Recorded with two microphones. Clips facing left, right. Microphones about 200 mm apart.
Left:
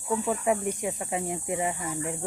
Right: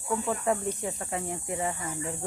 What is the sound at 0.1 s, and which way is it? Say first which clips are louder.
Speech: left 2 dB; 10° left (ahead or behind).